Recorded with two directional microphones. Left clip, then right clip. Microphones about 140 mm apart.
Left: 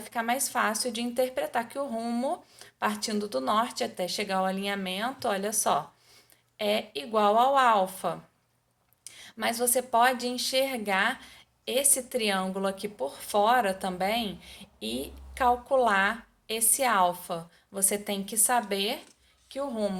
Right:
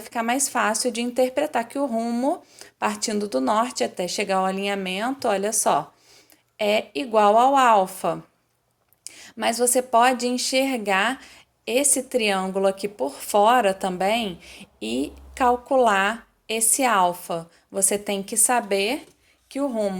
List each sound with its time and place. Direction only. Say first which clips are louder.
0.0 s a woman's voice: right 5 dB; 40° right (ahead or behind)